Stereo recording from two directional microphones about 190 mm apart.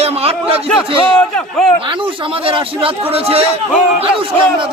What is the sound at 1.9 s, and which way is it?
Speech, 25° right (ahead or behind).